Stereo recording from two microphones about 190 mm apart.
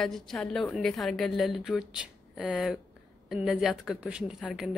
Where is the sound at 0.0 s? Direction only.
Centre (ahead or behind).